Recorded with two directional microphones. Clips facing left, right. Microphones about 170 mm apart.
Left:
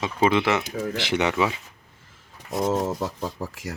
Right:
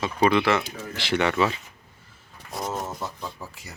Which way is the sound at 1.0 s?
20° left (ahead or behind).